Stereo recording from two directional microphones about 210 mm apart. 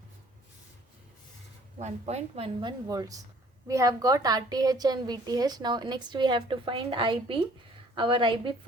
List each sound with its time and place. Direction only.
1.8 s a woman's voice: 30° right (ahead or behind)